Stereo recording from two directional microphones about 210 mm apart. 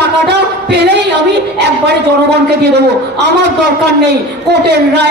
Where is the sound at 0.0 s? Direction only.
55° right (ahead or behind).